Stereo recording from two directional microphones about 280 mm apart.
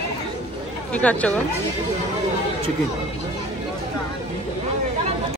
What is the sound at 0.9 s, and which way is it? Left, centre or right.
Speech, centre.